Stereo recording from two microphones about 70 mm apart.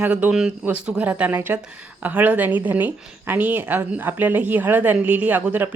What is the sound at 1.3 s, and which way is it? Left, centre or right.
A woman's voice, right.